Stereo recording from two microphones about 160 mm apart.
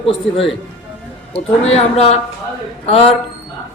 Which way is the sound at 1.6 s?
40° left (ahead or behind).